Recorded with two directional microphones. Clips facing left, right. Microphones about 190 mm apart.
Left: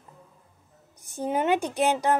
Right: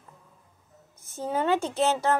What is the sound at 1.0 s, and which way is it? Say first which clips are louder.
A child's voice: left 2 dB; 15° left (ahead or behind).